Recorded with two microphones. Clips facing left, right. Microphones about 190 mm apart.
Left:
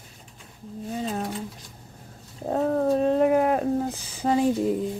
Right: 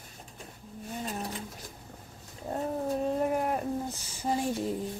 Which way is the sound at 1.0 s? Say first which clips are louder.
Left 6 dB; 90° left.